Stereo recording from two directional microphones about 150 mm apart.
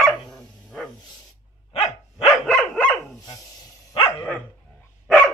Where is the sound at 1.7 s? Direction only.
40° left (ahead or behind).